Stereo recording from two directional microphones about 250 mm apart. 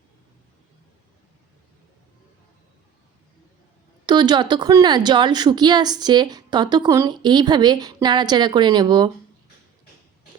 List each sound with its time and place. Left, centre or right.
4.0 s a woman's voice: centre